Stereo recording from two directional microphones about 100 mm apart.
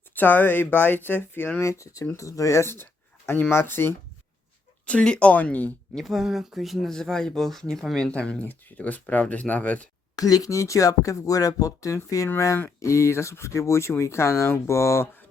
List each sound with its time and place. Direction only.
0.1 s speech: 20° left (ahead or behind)
1.8 s speech: 35° left (ahead or behind)
4.9 s speech: 10° left (ahead or behind)
6.0 s speech: centre (ahead or behind)
10.2 s speech: 40° left (ahead or behind)